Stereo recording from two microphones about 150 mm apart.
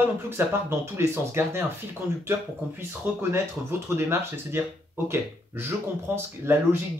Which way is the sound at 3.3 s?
15° right (ahead or behind).